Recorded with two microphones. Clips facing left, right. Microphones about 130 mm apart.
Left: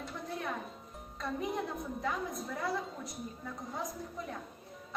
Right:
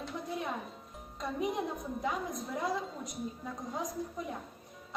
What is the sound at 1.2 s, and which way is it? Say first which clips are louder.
A woman's voice: right 2 dB; 15° right (ahead or behind).